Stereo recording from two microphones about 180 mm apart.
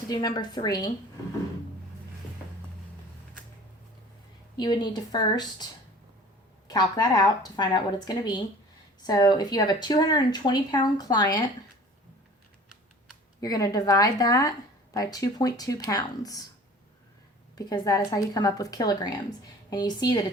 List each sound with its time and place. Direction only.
0.1 s speech: 20° left (ahead or behind)
4.5 s speech: 25° left (ahead or behind)
6.7 s speech: 20° left (ahead or behind)
13.4 s speech: 20° left (ahead or behind)
17.5 s speech: 20° left (ahead or behind)